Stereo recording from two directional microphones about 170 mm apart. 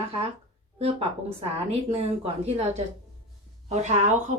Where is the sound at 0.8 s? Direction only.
35° right (ahead or behind).